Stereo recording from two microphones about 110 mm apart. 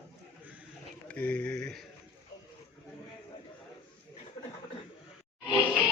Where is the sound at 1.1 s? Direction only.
15° left (ahead or behind).